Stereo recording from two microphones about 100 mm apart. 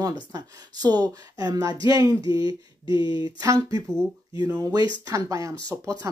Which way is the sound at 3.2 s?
40° right (ahead or behind).